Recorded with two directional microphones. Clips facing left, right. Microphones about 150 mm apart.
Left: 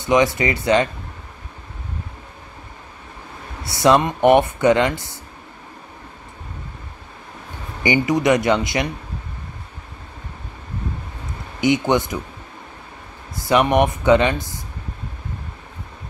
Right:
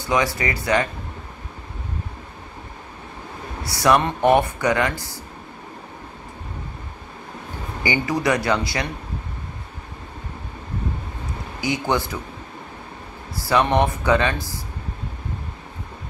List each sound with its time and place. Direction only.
0.0 s speech: 20° left (ahead or behind)
3.6 s speech: 20° left (ahead or behind)
7.8 s speech: 20° left (ahead or behind)
11.6 s speech: 20° left (ahead or behind)
13.3 s speech: 20° left (ahead or behind)